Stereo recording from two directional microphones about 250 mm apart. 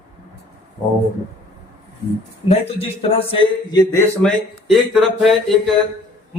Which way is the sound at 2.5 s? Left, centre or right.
Left.